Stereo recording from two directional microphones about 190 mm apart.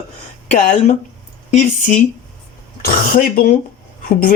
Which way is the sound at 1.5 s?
40° left (ahead or behind).